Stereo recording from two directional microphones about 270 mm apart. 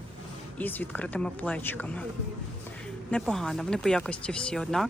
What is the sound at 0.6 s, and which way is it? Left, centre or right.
Speech, centre.